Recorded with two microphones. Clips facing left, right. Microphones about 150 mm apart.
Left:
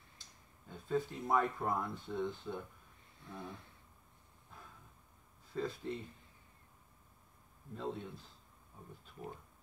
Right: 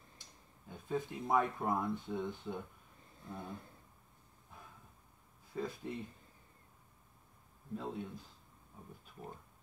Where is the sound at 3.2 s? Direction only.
35° right (ahead or behind).